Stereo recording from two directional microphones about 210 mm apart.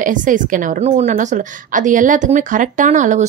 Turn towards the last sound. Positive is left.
turn(degrees=-35)  # may be behind; listen again after turning